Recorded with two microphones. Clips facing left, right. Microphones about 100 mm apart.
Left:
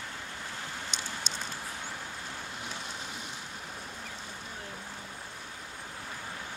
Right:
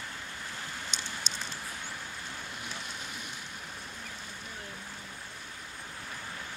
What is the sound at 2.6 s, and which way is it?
Vehicle, 30° left (ahead or behind).